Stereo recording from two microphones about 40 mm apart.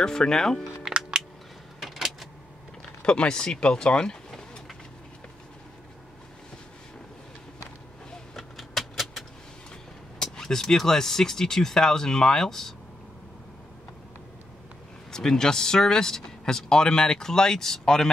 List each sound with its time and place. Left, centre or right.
0.0 s speech: centre
1.8 s a sound: centre
3.0 s speech: left
8.4 s vehicle: centre
10.1 s speech: centre
15.0 s speech: centre